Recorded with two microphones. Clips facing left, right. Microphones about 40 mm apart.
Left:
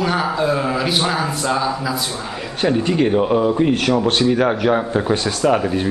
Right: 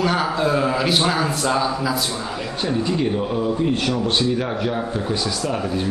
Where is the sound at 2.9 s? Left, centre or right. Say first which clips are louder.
Left 6 dB; left.